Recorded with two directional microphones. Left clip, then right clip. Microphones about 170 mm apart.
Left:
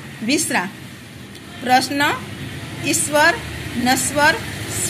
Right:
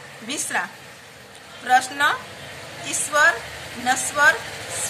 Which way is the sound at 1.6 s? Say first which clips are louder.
Left 2 dB; 25° left (ahead or behind).